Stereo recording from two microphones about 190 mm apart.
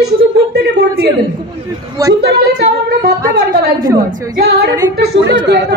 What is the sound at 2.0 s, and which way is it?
Speech, 20° right (ahead or behind).